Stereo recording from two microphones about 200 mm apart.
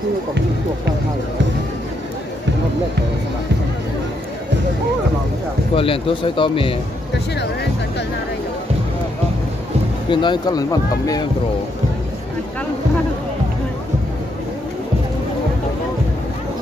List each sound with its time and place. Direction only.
5.8 s speech: 25° left (ahead or behind)
10.0 s speech: 25° left (ahead or behind)